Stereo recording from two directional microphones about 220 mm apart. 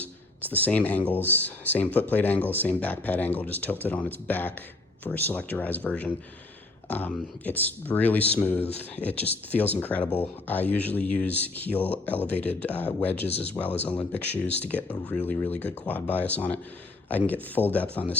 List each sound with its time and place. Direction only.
0.0 s speech: 5° left (ahead or behind)